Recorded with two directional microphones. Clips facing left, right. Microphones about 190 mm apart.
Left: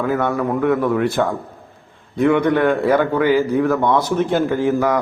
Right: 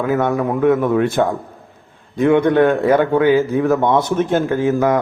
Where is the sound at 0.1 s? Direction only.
20° right (ahead or behind).